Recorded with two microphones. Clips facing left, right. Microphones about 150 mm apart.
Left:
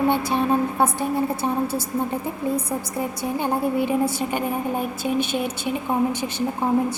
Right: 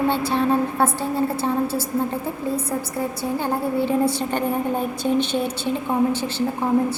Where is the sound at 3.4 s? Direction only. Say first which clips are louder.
Left 1 dB; 15° left (ahead or behind).